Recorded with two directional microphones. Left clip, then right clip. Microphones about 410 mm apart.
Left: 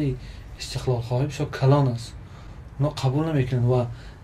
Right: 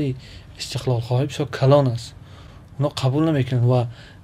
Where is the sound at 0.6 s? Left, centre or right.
Right.